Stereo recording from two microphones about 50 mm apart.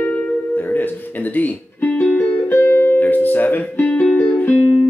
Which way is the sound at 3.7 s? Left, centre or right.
Left.